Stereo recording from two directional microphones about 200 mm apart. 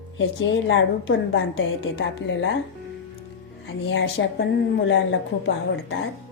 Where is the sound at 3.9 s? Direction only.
60° left (ahead or behind).